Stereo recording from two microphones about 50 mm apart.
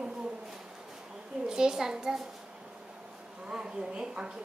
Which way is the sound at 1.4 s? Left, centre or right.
Centre.